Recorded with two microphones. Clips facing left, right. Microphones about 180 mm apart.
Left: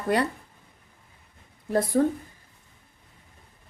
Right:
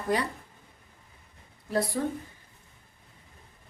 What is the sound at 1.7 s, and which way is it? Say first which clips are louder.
Speech: left 5 dB; 50° left (ahead or behind).